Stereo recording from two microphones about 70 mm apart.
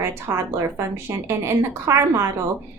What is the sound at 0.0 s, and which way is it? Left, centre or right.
A woman's voice, right.